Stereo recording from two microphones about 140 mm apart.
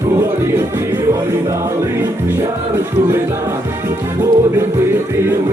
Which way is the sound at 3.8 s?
20° right (ahead or behind).